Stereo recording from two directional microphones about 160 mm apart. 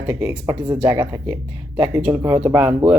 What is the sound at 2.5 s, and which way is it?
Speech, 10° right (ahead or behind).